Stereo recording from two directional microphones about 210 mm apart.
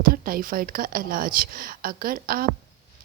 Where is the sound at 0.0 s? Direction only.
45° right (ahead or behind).